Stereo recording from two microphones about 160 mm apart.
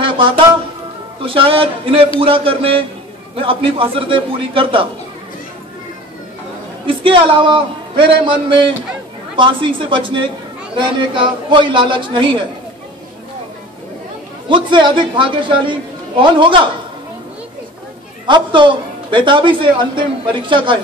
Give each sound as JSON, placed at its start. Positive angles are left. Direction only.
{"t": 1.2, "sound": "speech", "side_deg": -35}
{"t": 7.0, "sound": "speech", "side_deg": -35}
{"t": 14.5, "sound": "speech", "side_deg": -30}
{"t": 18.2, "sound": "speech", "side_deg": -30}